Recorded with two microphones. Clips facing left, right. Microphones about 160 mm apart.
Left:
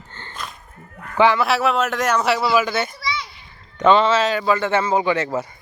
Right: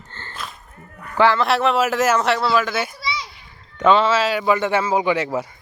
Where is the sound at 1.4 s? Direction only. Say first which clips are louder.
Right 1 dB; centre (ahead or behind).